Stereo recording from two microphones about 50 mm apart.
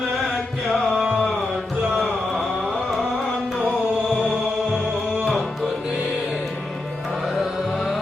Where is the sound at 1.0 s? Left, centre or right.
Right.